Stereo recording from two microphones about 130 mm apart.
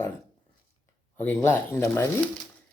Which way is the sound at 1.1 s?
15° left (ahead or behind).